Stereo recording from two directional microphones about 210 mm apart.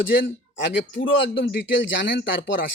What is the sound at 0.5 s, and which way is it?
A man's voice, 65° left (ahead or behind).